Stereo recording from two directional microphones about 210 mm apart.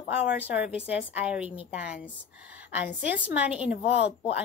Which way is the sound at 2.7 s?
5° right (ahead or behind).